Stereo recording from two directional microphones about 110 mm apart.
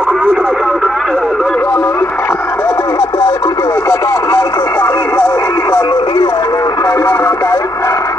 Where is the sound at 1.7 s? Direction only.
25° left (ahead or behind).